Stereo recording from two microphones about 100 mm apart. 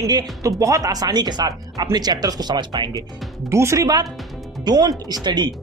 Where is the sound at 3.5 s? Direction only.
30° right (ahead or behind); by 5.4 s 45° right (ahead or behind).